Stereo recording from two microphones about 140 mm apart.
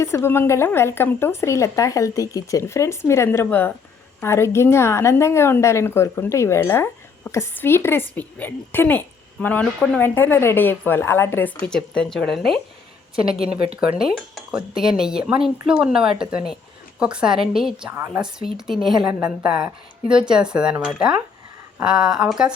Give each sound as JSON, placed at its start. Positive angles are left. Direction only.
{"t": 0.0, "sound": "a woman's voice", "side_deg": 20}
{"t": 11.6, "sound": "a woman's voice", "side_deg": 5}